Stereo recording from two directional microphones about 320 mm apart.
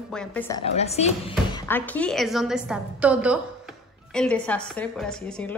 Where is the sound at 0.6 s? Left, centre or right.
Centre.